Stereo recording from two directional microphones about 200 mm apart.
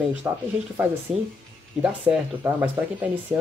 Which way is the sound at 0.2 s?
15° right (ahead or behind).